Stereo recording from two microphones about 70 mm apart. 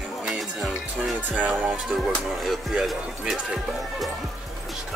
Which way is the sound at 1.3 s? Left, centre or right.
Right.